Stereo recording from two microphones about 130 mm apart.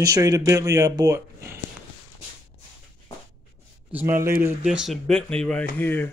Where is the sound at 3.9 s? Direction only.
15° right (ahead or behind).